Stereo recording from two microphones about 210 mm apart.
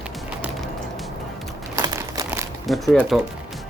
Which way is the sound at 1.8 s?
15° right (ahead or behind).